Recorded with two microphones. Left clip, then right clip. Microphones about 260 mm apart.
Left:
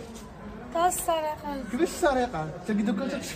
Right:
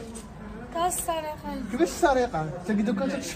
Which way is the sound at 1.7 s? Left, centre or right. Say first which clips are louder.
Right 2 dB; centre.